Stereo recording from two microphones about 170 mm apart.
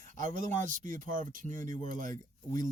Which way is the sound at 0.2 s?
50° right (ahead or behind).